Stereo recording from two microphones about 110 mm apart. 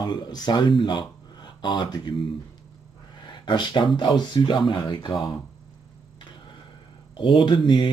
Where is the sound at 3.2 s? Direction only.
45° left (ahead or behind).